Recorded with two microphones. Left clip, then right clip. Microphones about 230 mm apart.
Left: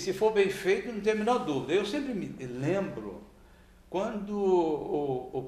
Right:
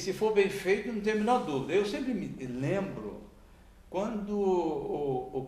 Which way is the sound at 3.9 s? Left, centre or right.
Left.